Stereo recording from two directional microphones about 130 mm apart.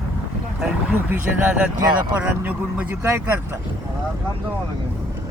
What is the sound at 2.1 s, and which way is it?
Speech, 10° right (ahead or behind).